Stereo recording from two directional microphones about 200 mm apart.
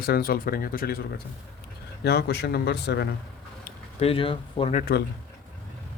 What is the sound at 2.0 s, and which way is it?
A man's voice, 55° left (ahead or behind).